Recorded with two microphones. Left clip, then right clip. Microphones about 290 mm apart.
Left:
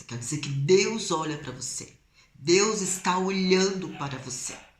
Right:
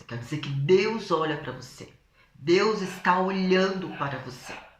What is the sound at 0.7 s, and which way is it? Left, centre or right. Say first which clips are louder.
Speech: even; centre.